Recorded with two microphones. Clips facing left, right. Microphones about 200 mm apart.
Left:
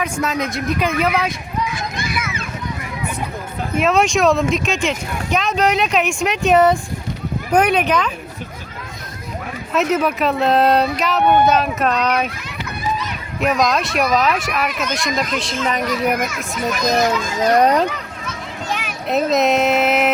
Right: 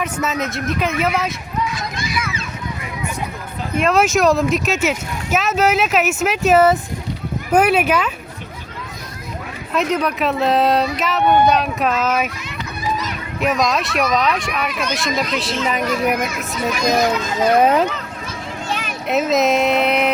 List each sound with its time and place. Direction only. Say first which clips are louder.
0.0 s speech: left 1 dB; 5° right (ahead or behind)
2.0 s a sound: even; 55° left (ahead or behind)
3.8 s speech: even; centre (ahead or behind)
9.7 s speech: left 1 dB; 5° left (ahead or behind)
13.4 s speech: left 1 dB; centre (ahead or behind)
17.2 s speech: right 1 dB; 5° right (ahead or behind)
19.0 s speech: even; centre (ahead or behind)